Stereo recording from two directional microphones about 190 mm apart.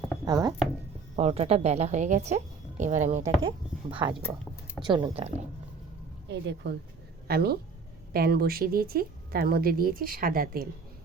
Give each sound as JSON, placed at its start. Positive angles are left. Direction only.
{"t": 0.3, "sound": "speech", "side_deg": -20}
{"t": 1.1, "sound": "a woman's voice", "side_deg": -35}
{"t": 3.4, "sound": "speech", "side_deg": -30}
{"t": 6.2, "sound": "a woman's voice", "side_deg": -65}